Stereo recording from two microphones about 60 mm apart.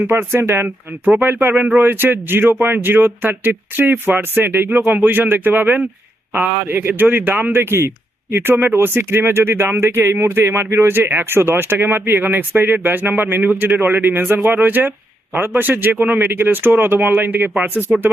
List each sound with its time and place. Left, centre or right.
0.1 s speech: right
17.9 s speech: right